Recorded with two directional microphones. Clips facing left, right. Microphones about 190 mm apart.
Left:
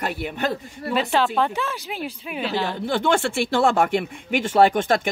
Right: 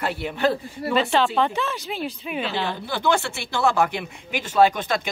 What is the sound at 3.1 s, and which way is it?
Speech, 50° left (ahead or behind).